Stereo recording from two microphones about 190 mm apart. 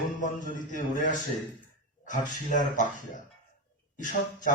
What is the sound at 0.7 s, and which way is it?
Speech, 40° left (ahead or behind).